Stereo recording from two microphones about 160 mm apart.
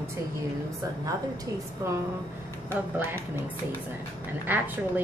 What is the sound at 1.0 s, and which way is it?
A woman's voice, 20° right (ahead or behind).